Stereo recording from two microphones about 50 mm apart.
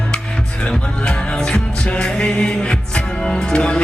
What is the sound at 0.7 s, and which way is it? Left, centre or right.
Music, centre.